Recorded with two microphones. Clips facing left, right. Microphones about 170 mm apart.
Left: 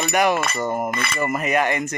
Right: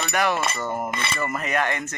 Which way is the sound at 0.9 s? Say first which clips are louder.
Left 2 dB; 25° right (ahead or behind).